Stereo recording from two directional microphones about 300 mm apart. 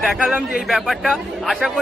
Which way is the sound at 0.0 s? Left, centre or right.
Centre.